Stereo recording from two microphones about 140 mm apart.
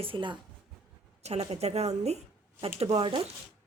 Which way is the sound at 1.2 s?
50° right (ahead or behind).